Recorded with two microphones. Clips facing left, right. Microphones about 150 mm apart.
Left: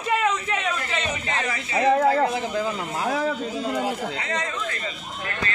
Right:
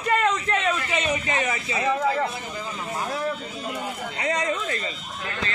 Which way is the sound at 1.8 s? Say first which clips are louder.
Left 5 dB; 55° left (ahead or behind).